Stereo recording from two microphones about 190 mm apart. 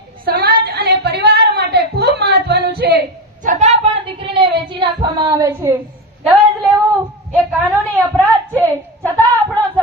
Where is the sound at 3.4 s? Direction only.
35° right (ahead or behind); by 5.7 s 15° right (ahead or behind).